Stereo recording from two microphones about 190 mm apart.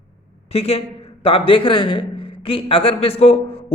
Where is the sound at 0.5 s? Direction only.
30° left (ahead or behind).